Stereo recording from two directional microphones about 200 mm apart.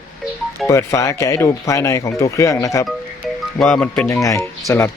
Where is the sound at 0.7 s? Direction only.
15° left (ahead or behind).